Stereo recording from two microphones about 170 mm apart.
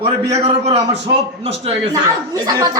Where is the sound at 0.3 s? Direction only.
35° right (ahead or behind).